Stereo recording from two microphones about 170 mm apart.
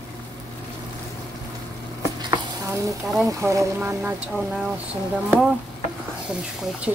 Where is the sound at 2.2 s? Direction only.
20° right (ahead or behind).